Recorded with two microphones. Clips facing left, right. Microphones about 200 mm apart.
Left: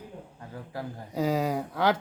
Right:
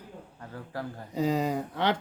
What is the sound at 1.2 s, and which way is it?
Speech, 5° left (ahead or behind).